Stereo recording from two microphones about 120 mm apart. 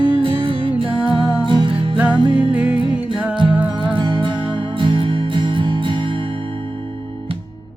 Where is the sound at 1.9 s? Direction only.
10° right (ahead or behind).